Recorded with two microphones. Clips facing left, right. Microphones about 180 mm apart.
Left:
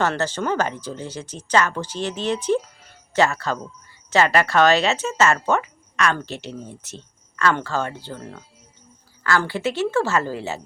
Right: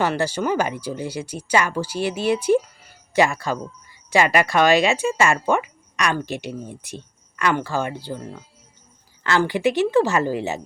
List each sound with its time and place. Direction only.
0.0 s speech: 10° right (ahead or behind)